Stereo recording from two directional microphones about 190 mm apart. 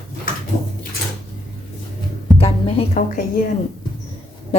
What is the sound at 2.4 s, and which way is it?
Music, 30° left (ahead or behind).